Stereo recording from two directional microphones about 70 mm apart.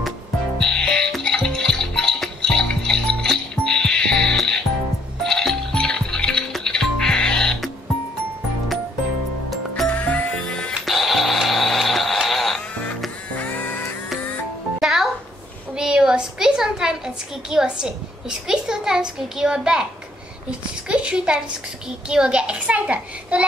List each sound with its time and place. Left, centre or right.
0.6 s music: centre
5.2 s coin: centre
6.5 s music: centre
9.8 s music: left
10.3 s music: centre
13.3 s music: left
14.8 s music: centre
15.7 s a sound: centre
22.1 s a child's voice: centre